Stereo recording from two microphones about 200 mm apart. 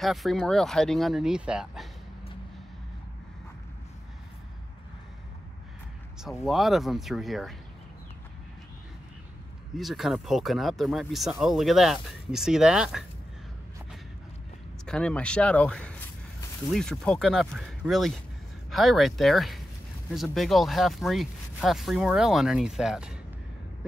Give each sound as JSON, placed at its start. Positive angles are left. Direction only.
{"t": 0.0, "sound": "speech", "side_deg": 0}
{"t": 6.2, "sound": "speech", "side_deg": 0}
{"t": 9.8, "sound": "speech", "side_deg": 0}
{"t": 14.9, "sound": "speech", "side_deg": 5}